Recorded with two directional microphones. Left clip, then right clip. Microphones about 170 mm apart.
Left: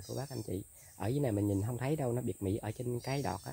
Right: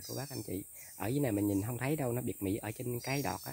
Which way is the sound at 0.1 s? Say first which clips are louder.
Left 1 dB; 20° right (ahead or behind).